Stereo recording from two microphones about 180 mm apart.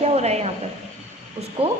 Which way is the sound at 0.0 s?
35° right (ahead or behind).